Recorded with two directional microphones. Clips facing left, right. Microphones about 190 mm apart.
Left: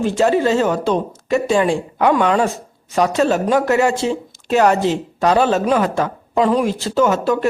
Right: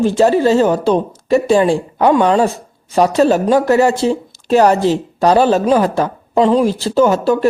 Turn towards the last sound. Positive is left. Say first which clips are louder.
# right 4 dB
turn(degrees=-35)  # may be behind; listen again after turning